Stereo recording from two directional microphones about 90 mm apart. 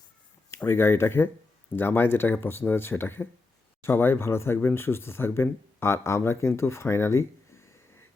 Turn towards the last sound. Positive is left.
turn(degrees=30)  # may be behind; listen again after turning